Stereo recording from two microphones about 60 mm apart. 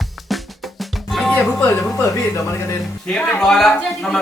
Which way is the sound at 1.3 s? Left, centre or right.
Left.